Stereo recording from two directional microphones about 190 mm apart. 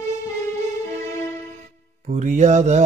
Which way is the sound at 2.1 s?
40° right (ahead or behind).